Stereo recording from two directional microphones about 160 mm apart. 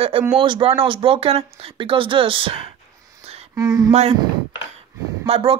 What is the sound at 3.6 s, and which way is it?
Speech, 25° right (ahead or behind).